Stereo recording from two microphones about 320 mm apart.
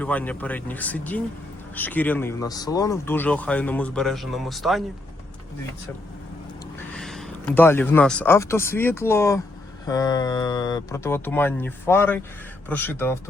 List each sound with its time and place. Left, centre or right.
0.0 s speech: centre
6.7 s speech: centre